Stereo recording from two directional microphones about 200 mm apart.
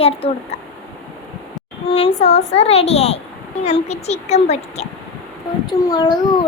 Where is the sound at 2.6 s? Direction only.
30° left (ahead or behind).